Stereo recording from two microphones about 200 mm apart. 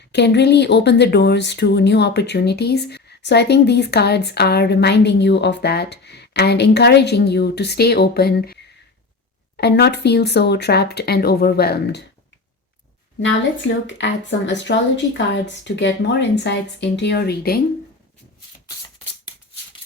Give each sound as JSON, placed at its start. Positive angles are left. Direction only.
{"t": 0.1, "sound": "speech", "side_deg": 60}
{"t": 9.6, "sound": "speech", "side_deg": 55}
{"t": 13.2, "sound": "speech", "side_deg": 65}